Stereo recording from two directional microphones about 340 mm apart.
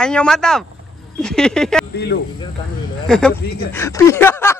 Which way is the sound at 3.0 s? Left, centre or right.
Centre.